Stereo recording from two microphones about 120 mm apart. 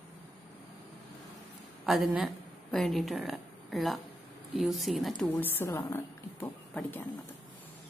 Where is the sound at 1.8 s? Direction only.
Centre (ahead or behind).